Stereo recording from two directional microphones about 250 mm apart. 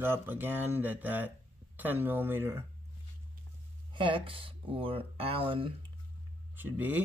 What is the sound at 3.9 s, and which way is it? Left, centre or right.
Speech, centre.